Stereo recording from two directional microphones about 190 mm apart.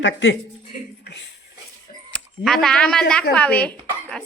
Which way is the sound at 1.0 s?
65° left (ahead or behind).